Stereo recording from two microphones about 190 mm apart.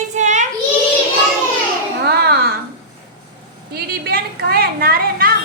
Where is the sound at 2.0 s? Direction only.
55° right (ahead or behind).